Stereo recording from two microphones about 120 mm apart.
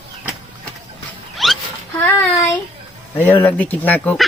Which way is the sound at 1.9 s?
15° left (ahead or behind).